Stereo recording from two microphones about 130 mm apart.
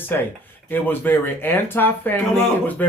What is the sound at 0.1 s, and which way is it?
Speech, 15° left (ahead or behind).